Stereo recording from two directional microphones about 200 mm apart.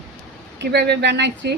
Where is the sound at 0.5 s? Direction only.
60° right (ahead or behind).